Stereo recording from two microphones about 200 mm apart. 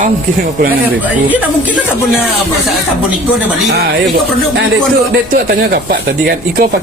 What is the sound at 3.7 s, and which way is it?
Speech, 50° right (ahead or behind).